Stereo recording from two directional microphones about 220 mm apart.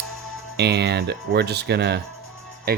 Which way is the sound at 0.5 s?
50° right (ahead or behind).